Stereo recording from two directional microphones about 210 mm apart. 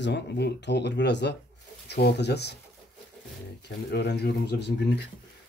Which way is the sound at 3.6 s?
50° left (ahead or behind).